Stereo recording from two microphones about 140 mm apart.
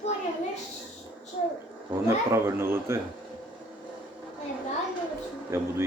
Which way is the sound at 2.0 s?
20° right (ahead or behind).